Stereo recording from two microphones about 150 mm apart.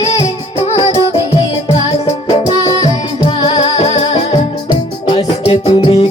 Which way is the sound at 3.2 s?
35° left (ahead or behind).